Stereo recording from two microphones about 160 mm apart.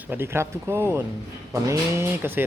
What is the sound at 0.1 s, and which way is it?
Speech, 15° right (ahead or behind).